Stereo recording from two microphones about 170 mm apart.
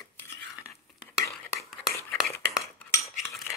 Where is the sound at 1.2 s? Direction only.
20° left (ahead or behind).